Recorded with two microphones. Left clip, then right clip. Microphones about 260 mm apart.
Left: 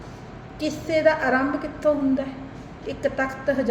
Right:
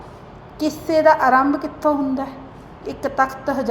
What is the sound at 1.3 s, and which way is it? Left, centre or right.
A woman's voice, centre.